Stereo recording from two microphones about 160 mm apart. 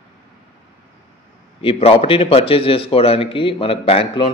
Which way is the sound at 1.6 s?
35° left (ahead or behind).